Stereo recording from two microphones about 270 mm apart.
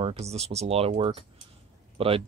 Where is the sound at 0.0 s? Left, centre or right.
Right.